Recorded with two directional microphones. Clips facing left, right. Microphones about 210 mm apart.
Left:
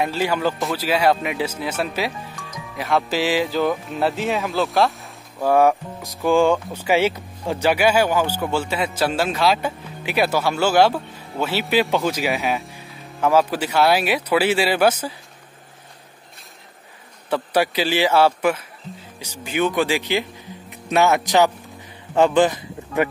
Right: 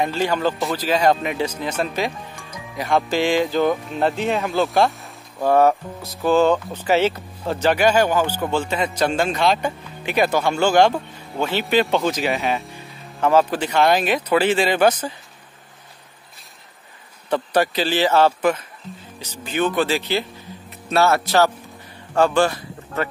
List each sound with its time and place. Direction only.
0.0 s a man's voice: 5° left (ahead or behind)
17.3 s speech: 10° left (ahead or behind)